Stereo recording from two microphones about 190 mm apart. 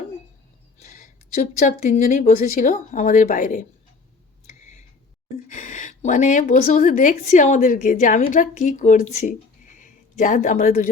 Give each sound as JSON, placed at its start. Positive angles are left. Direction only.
{"t": 0.8, "sound": "speech", "side_deg": 40}
{"t": 4.4, "sound": "a sound", "side_deg": 40}
{"t": 5.5, "sound": "a woman's voice", "side_deg": 40}